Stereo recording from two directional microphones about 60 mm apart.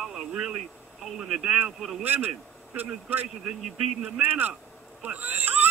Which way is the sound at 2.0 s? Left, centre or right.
Right.